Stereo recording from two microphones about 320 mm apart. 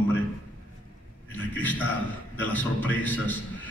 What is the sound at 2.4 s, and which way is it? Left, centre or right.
Speech, centre.